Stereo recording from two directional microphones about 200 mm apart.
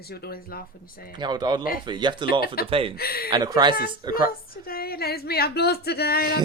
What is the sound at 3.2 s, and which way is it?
Speech, 20° right (ahead or behind).